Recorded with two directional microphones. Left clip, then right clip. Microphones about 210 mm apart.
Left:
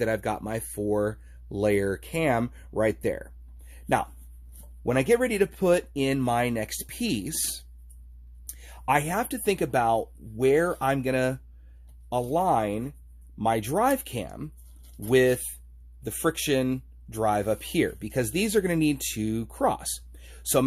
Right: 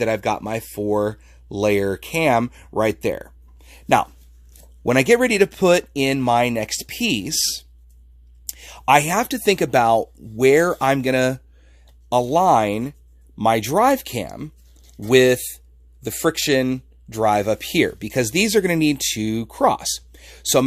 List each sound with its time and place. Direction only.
0.0 s speech: 30° right (ahead or behind)
8.5 s speech: 35° right (ahead or behind)